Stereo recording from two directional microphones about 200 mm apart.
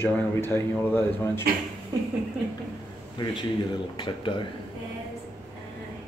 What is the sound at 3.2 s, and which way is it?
Speech, 25° left (ahead or behind).